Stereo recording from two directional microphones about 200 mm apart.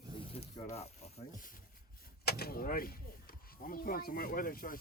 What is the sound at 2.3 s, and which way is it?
Speech, 50° left (ahead or behind).